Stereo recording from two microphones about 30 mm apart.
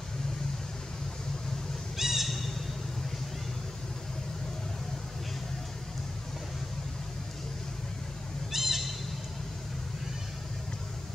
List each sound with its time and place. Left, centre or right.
2.0 s crow: centre
8.5 s crow: centre